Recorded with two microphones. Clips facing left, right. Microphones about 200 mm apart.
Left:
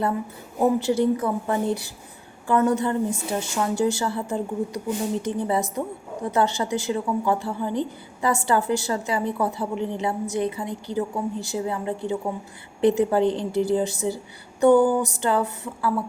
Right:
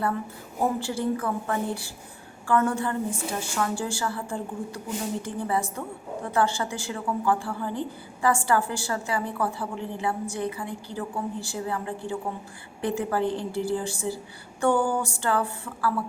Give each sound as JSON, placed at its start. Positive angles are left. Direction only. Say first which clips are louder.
{"t": 0.8, "sound": "a woman's voice", "louder": "left 6 dB", "side_deg": 20}